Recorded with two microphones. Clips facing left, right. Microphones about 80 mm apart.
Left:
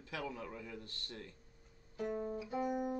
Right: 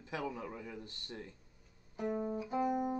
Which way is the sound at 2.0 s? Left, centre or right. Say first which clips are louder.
Right 2 dB; right.